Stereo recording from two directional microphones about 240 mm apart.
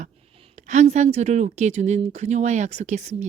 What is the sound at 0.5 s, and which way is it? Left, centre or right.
Speech, right.